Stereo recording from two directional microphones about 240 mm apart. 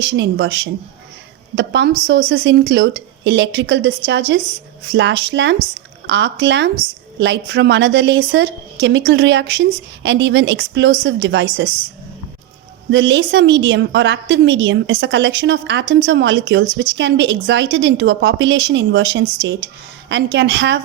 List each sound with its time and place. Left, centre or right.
0.0 s a woman's voice: right
12.9 s a woman's voice: right